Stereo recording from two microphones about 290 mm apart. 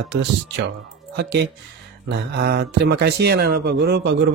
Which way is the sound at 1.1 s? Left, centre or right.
Right.